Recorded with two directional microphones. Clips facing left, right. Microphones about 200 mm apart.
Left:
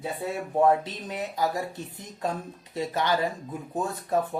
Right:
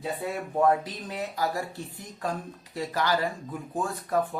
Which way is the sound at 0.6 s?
20° left (ahead or behind).